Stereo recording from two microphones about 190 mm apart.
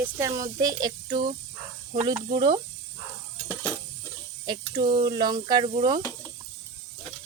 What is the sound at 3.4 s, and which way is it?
Sizzle, 10° left (ahead or behind).